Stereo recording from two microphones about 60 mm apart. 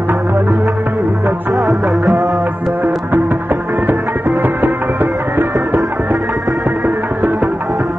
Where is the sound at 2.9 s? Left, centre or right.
Right.